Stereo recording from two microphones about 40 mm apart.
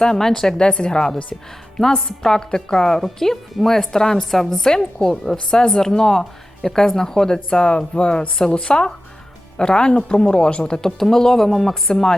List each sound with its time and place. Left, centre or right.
0.0 s speech: centre
0.6 s speech: left
1.8 s speech: centre